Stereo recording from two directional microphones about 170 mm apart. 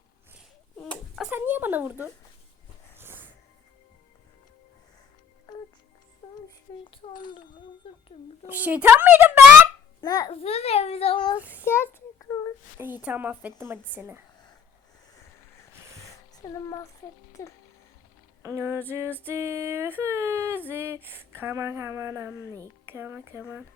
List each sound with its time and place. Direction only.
0.8 s a sound: centre (ahead or behind)
1.3 s a sound: 10° right (ahead or behind)
6.2 s music: 30° left (ahead or behind)
6.8 s speech: 30° left (ahead or behind)
7.8 s a sound: 35° left (ahead or behind)
8.4 s female singing: 10° right (ahead or behind)
10.0 s a child's voice: 20° left (ahead or behind)
10.4 s a child's voice: 35° left (ahead or behind)
11.3 s female singing: 10° right (ahead or behind)
11.6 s child singing: 15° left (ahead or behind)
12.7 s female singing: 10° right (ahead or behind)
16.0 s a sound: 20° left (ahead or behind)
17.4 s a child's voice: 15° left (ahead or behind)
18.4 s female singing: 15° right (ahead or behind)